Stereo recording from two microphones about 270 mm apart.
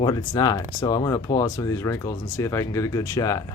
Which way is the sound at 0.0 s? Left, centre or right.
Centre.